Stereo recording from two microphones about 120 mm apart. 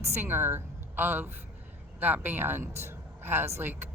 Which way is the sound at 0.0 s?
20° right (ahead or behind).